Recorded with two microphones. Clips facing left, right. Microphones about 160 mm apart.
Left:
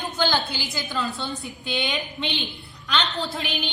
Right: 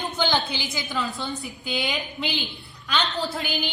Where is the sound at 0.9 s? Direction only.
Centre (ahead or behind).